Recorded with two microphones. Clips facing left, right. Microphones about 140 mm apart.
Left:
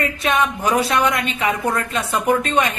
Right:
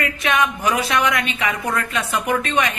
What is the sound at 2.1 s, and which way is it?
Speech, 30° left (ahead or behind).